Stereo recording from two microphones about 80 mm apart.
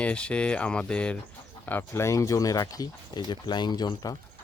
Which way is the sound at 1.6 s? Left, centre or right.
Left.